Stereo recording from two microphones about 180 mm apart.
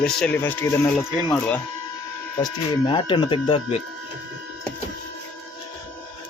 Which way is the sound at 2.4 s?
25° left (ahead or behind).